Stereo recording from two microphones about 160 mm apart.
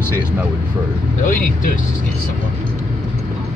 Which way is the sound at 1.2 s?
55° left (ahead or behind).